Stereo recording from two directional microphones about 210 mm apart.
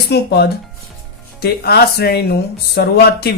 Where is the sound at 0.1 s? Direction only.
50° left (ahead or behind).